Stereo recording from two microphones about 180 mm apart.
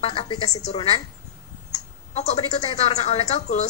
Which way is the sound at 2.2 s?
35° left (ahead or behind).